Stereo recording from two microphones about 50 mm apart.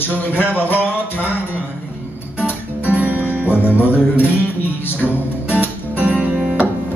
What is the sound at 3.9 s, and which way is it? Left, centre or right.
Music, left.